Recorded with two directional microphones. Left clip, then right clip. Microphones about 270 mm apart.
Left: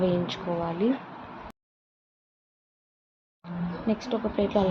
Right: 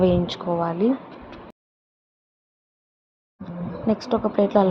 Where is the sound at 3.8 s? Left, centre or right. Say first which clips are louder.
Right 7 dB; centre.